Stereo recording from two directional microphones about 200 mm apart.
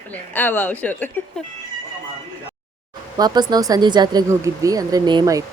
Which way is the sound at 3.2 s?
20° right (ahead or behind).